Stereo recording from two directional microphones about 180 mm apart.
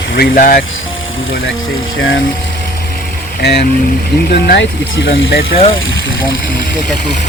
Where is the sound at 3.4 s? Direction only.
65° left (ahead or behind).